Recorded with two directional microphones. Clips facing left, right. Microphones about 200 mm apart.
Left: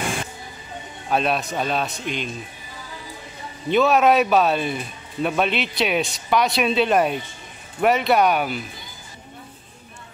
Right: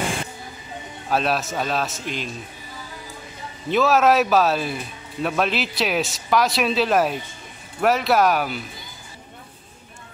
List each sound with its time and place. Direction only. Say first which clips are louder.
1.0 s speech: even; centre (ahead or behind)
3.7 s speech: left 1 dB; centre (ahead or behind)